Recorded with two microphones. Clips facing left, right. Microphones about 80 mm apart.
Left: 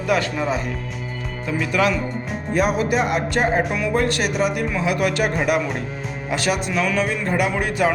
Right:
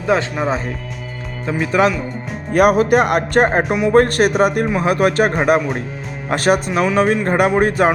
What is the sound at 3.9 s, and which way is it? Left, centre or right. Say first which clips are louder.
Speech: right 9 dB; right.